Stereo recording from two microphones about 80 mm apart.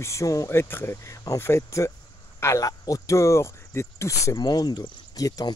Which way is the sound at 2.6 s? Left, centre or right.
Left.